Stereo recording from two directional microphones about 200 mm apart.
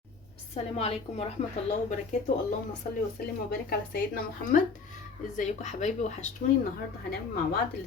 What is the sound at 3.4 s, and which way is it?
Speech, 50° left (ahead or behind).